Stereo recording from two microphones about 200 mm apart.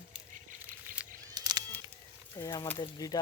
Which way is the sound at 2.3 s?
20° left (ahead or behind).